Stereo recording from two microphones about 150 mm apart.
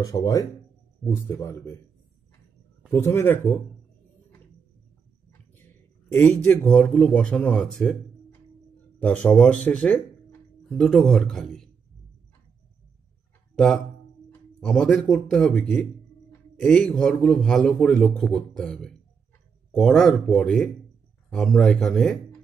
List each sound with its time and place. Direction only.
0.0 s speech: 25° left (ahead or behind)
2.9 s speech: 15° left (ahead or behind)
6.2 s a man's voice: 15° left (ahead or behind)
14.6 s a man's voice: 5° left (ahead or behind)